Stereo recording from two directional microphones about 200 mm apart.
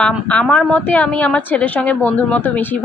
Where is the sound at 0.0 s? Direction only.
5° left (ahead or behind).